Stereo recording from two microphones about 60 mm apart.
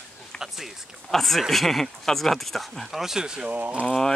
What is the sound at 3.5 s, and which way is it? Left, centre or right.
Speech, right.